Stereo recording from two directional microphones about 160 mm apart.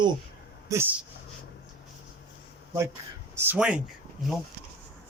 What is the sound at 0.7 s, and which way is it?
Speech, 15° right (ahead or behind).